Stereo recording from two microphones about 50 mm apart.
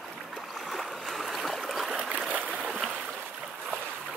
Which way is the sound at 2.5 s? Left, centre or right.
Centre.